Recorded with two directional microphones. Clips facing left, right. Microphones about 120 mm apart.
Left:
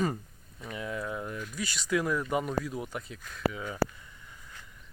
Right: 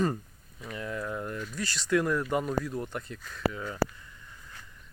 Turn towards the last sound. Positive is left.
turn(degrees=10)  # may be behind; listen again after turning